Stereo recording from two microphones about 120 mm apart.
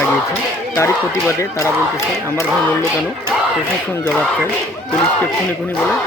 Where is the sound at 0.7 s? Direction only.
25° left (ahead or behind).